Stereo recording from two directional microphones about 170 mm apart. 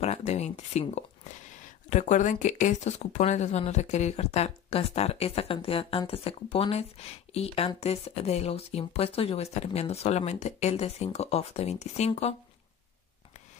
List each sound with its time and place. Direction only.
0.0 s speech: 40° left (ahead or behind)